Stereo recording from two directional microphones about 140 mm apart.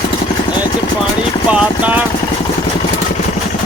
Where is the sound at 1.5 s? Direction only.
10° right (ahead or behind).